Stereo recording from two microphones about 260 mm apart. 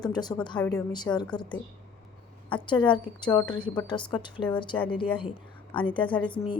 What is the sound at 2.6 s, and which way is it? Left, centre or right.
A woman's voice, centre.